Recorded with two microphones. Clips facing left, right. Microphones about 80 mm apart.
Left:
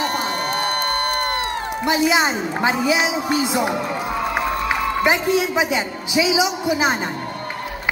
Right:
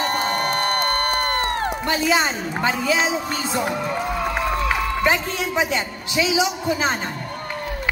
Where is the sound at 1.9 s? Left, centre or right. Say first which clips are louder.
Left 4 dB; centre.